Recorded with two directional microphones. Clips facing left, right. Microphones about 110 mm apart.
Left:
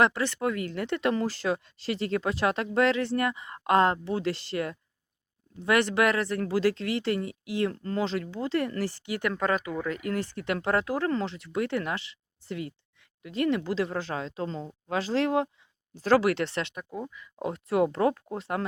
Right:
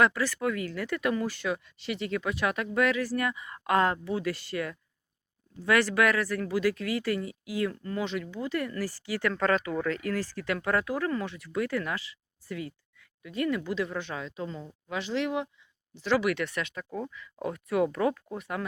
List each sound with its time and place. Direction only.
0.0 s speech: 25° left (ahead or behind)
16.7 s speech: 15° left (ahead or behind)